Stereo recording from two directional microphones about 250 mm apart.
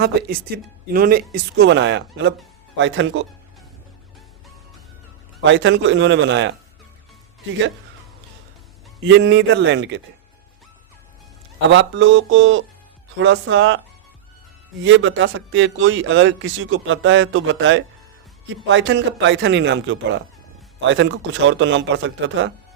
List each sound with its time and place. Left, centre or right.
0.0 s a man's voice: right
5.4 s a man's voice: right
9.0 s a man's voice: right
11.7 s a man's voice: right